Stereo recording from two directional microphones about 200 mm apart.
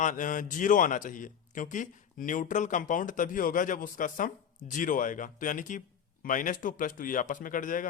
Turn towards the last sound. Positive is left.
turn(degrees=40)  # may be behind; listen again after turning